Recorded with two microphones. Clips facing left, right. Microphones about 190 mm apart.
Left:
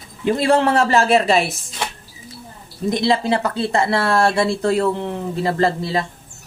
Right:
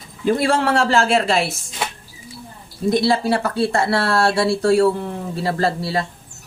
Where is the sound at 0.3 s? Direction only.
20° left (ahead or behind).